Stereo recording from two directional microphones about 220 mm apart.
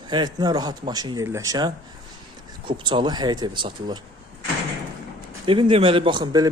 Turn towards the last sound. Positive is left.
turn(degrees=-20)  # may be behind; listen again after turning